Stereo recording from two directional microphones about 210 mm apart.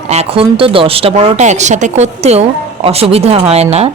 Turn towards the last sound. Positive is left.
turn(degrees=-30)  # may be behind; listen again after turning